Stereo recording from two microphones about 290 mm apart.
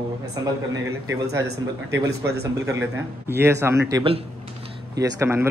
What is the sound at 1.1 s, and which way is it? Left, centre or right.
Speech, centre.